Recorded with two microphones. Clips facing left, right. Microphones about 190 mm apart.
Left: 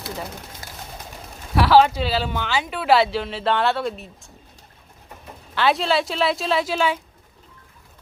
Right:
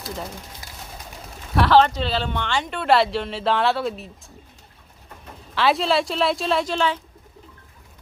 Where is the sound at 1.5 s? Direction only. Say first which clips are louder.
Left 1 dB; 5° left (ahead or behind).